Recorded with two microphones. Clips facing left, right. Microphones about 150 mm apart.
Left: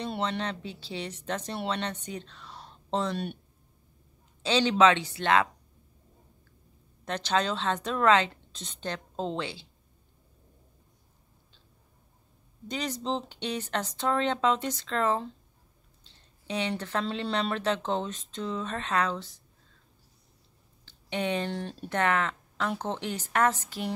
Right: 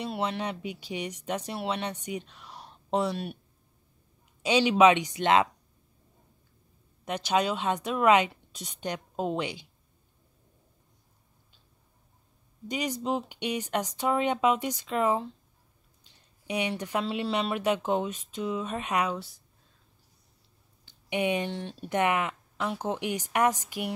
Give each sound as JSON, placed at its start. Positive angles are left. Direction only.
{"t": 0.0, "sound": "speech", "side_deg": -5}
{"t": 4.4, "sound": "speech", "side_deg": -10}
{"t": 7.1, "sound": "speech", "side_deg": -10}
{"t": 12.6, "sound": "speech", "side_deg": -10}
{"t": 20.8, "sound": "a sound", "side_deg": -10}
{"t": 21.5, "sound": "speech", "side_deg": 0}
{"t": 21.8, "sound": "speech", "side_deg": -15}